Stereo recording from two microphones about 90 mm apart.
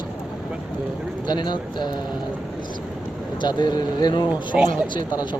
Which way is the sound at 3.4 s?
55° left (ahead or behind).